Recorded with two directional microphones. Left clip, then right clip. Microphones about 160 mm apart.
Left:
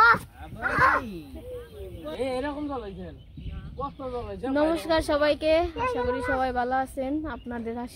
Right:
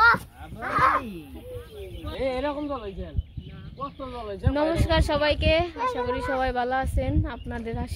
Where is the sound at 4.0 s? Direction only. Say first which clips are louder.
Left 1 dB; 55° left (ahead or behind).